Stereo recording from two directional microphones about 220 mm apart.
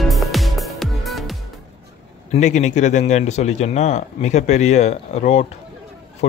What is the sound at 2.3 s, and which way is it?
Speech, 30° left (ahead or behind).